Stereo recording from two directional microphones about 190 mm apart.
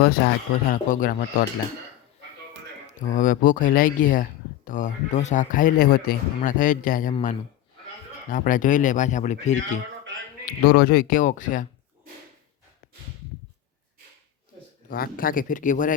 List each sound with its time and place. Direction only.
0.0 s speech: 60° left (ahead or behind)
3.0 s speech: 45° left (ahead or behind)
10.4 s speech: 50° left (ahead or behind)
14.8 s speech: 50° left (ahead or behind)